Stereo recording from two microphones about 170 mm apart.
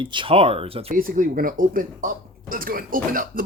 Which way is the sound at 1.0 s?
55° right (ahead or behind).